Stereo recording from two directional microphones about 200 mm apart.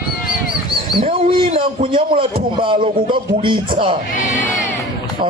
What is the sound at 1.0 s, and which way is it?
A man's voice, 30° right (ahead or behind).